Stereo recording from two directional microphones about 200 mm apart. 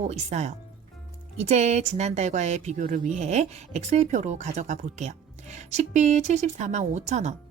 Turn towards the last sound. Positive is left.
turn(degrees=-35)  # may be behind; listen again after turning